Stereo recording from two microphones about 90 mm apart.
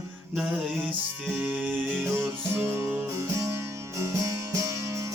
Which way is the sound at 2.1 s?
30° right (ahead or behind).